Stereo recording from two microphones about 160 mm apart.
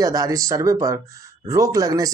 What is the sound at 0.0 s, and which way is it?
Speech, 20° right (ahead or behind).